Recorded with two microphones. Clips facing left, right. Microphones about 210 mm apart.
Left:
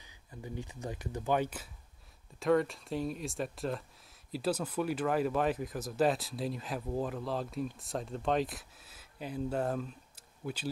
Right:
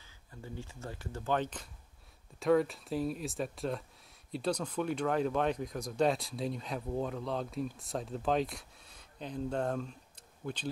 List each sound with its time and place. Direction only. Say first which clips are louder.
0.0 s speech: left 3 dB; 15° left (ahead or behind)